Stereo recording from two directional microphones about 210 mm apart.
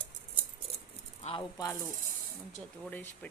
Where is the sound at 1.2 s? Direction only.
25° left (ahead or behind).